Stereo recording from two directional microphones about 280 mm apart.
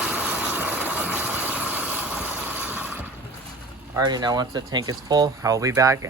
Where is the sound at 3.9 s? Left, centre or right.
Centre.